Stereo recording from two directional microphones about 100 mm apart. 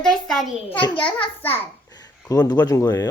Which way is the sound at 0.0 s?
5° left (ahead or behind).